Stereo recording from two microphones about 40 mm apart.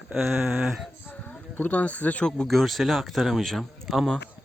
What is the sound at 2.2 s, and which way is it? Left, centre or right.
Speech, left.